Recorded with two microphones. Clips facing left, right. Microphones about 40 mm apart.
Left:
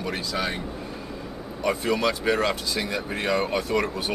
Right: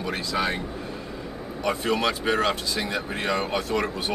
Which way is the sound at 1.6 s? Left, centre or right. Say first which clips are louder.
Left 1 dB; centre.